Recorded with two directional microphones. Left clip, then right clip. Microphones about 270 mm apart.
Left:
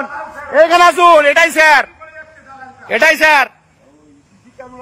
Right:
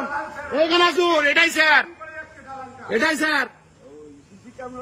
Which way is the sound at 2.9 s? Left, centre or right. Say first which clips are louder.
Left 11 dB; centre.